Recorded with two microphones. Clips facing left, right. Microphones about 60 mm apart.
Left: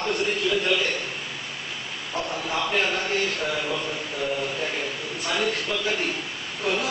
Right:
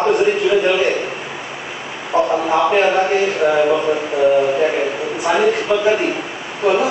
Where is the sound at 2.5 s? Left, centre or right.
Right.